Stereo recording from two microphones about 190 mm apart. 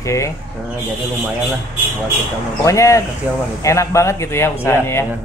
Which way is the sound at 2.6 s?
15° left (ahead or behind).